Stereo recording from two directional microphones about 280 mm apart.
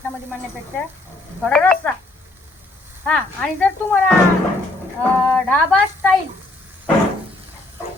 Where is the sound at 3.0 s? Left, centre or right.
Centre.